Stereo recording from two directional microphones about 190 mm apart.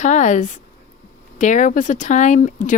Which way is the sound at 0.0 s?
40° left (ahead or behind).